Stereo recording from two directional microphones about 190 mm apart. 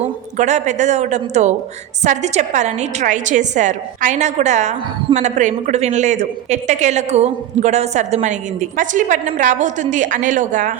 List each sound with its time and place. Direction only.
0.3 s a woman's voice: 40° right (ahead or behind)